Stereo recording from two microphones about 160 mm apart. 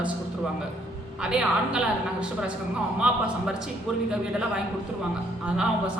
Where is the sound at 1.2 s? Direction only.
5° right (ahead or behind).